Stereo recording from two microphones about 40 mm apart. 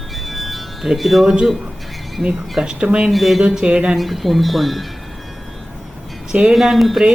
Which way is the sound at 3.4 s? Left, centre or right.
Right.